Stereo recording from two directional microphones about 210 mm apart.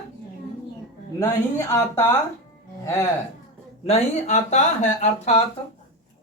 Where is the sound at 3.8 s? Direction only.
30° left (ahead or behind).